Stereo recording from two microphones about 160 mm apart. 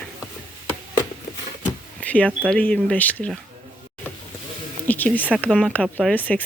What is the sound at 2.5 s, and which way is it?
Speech, 5° left (ahead or behind).